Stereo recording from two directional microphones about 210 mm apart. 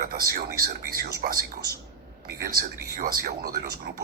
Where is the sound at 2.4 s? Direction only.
45° right (ahead or behind).